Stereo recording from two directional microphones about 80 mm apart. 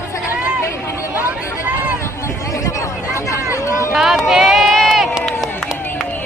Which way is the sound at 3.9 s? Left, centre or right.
Centre.